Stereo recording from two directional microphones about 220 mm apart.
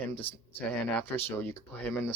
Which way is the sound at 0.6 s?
10° left (ahead or behind).